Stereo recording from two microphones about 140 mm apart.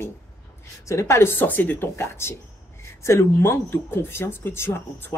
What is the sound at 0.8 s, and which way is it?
Speech, 20° left (ahead or behind).